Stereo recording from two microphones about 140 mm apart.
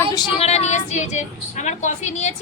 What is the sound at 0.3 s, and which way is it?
A woman's voice, 50° left (ahead or behind).